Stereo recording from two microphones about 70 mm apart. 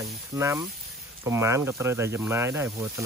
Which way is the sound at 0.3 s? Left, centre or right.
Right.